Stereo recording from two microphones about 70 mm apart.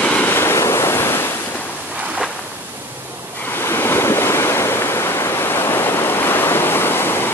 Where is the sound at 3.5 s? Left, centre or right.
Left.